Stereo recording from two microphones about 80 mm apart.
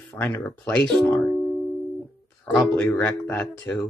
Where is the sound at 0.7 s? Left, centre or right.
Centre.